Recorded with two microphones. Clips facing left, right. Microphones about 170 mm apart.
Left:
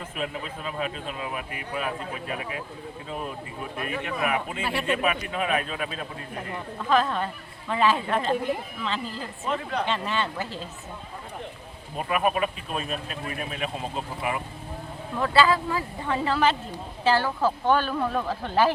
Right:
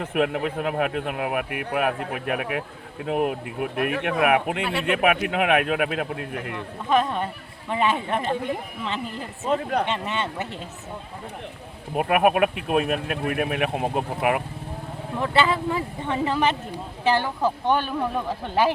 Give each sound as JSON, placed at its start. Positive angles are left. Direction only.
{"t": 0.0, "sound": "speech", "side_deg": -70}
{"t": 4.6, "sound": "speech", "side_deg": 0}
{"t": 4.9, "sound": "speech", "side_deg": -70}
{"t": 6.8, "sound": "speech", "side_deg": -20}
{"t": 9.4, "sound": "speech", "side_deg": -45}
{"t": 9.9, "sound": "speech", "side_deg": -20}
{"t": 11.9, "sound": "speech", "side_deg": -65}
{"t": 15.2, "sound": "speech", "side_deg": -20}